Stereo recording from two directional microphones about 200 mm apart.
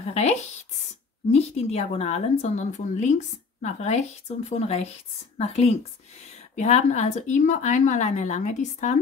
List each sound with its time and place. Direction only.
0.0 s a woman's voice: 35° left (ahead or behind)